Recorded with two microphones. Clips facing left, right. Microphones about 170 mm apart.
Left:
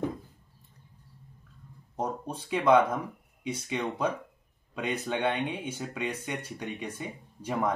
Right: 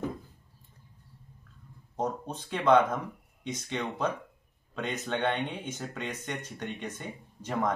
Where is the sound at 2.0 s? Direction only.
10° left (ahead or behind).